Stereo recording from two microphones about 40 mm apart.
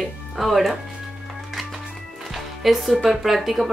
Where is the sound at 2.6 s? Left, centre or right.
Centre.